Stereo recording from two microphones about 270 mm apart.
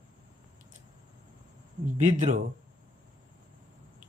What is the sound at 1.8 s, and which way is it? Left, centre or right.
Speech, right.